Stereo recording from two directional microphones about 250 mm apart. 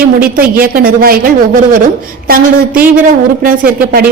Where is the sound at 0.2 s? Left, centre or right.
Right.